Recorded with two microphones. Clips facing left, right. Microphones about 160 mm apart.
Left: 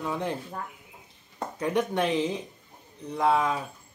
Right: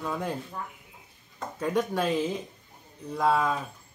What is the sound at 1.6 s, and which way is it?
Speech, 20° left (ahead or behind).